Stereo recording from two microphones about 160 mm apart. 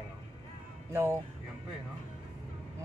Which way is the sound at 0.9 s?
15° right (ahead or behind).